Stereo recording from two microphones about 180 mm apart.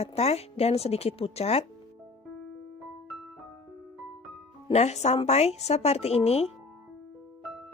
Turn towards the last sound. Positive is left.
turn(degrees=35)  # may be behind; listen again after turning